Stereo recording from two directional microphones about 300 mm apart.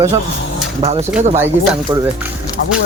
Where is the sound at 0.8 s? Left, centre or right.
Right.